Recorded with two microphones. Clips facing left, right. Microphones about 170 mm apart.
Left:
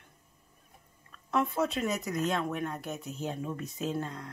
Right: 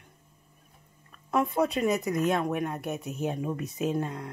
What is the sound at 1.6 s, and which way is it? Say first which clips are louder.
Speech: right 6 dB; 35° right (ahead or behind).